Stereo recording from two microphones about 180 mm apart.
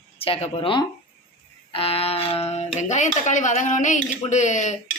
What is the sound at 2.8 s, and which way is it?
Speech, 40° left (ahead or behind).